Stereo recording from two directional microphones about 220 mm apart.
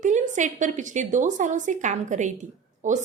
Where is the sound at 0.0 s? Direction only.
35° right (ahead or behind).